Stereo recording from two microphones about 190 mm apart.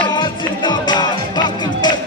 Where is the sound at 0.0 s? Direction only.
25° left (ahead or behind).